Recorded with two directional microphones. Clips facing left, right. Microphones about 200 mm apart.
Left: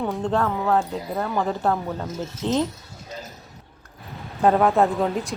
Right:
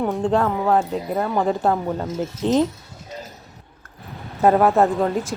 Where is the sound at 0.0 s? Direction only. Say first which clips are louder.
Right 3 dB; 15° right (ahead or behind).